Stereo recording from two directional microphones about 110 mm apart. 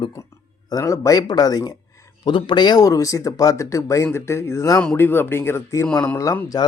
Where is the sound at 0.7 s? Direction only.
30° left (ahead or behind).